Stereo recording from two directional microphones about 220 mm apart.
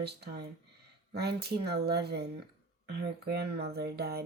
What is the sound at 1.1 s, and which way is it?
Speech, 50° right (ahead or behind).